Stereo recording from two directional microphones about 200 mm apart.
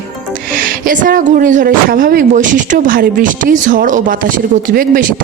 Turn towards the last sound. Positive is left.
turn(degrees=-45)  # may be behind; listen again after turning